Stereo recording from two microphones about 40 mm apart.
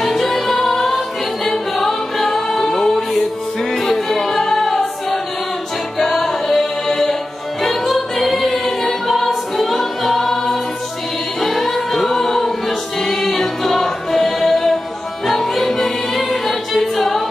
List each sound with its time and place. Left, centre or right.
0.0 s music: centre
7.9 s choir: centre
11.4 s music: centre